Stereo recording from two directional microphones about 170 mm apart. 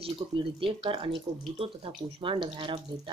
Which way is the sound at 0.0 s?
30° right (ahead or behind).